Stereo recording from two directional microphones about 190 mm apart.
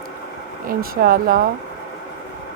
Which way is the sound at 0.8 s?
50° right (ahead or behind).